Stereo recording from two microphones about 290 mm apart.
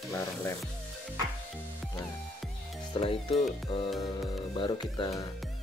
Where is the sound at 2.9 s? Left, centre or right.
Centre.